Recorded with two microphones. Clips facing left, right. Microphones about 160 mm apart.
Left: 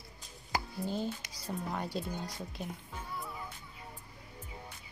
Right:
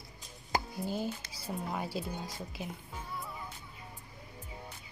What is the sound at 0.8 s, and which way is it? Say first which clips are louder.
Speech: even; 10° right (ahead or behind).